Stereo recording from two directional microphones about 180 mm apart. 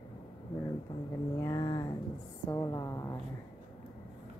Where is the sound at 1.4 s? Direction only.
20° left (ahead or behind).